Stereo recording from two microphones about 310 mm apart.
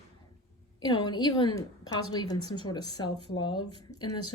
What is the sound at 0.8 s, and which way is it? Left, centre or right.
A woman's voice, centre.